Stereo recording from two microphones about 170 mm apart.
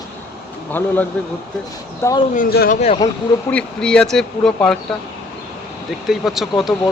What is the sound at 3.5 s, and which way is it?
Speech, 5° left (ahead or behind).